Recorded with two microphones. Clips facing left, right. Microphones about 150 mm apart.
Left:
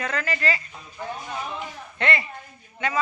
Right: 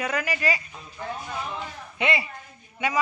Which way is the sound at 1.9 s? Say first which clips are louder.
Even; 10° right (ahead or behind).